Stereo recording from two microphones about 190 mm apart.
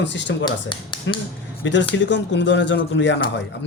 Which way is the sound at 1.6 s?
70° left (ahead or behind).